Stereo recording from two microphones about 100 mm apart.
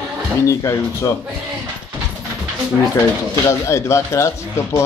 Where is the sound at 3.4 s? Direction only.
30° left (ahead or behind).